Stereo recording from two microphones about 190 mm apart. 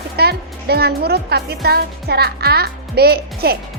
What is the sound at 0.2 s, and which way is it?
Speech, 55° right (ahead or behind).